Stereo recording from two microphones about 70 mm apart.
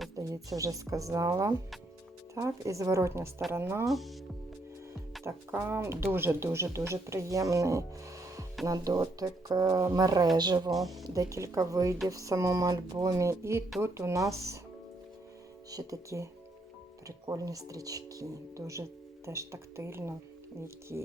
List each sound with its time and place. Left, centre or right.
0.2 s speech: right
3.8 s speech: centre
5.2 s speech: right
10.3 s speech: right
10.8 s speech: centre
11.0 s speech: right
15.7 s speech: right